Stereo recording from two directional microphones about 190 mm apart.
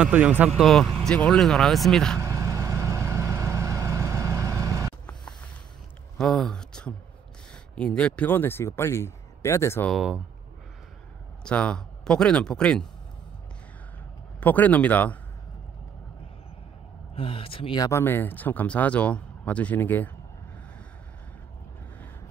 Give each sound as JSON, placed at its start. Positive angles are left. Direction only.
{"t": 0.0, "sound": "speech", "side_deg": -10}
{"t": 0.5, "sound": "speech", "side_deg": 0}
{"t": 2.1, "sound": "vehicle", "side_deg": -15}
{"t": 6.1, "sound": "speech", "side_deg": 5}
{"t": 9.8, "sound": "speech", "side_deg": -5}
{"t": 11.4, "sound": "speech", "side_deg": 5}
{"t": 14.4, "sound": "speech", "side_deg": 10}
{"t": 17.1, "sound": "speech", "side_deg": 30}